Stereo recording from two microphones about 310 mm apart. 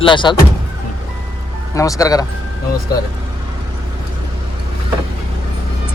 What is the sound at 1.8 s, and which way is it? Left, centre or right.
Speech, centre.